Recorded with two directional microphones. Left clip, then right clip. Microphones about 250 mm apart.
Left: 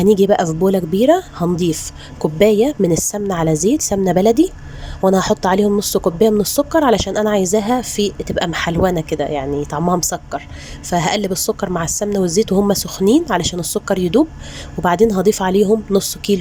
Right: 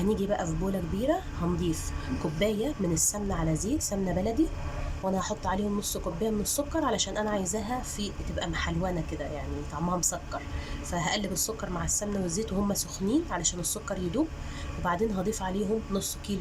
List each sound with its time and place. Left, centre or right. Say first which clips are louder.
0.0 s speech: left 16 dB; left